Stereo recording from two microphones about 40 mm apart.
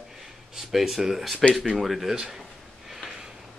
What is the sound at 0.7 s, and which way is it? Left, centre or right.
Speech, centre.